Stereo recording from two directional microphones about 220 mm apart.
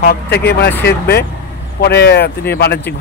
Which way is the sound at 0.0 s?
45° left (ahead or behind).